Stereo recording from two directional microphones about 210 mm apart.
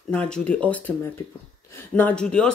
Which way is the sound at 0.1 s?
5° left (ahead or behind).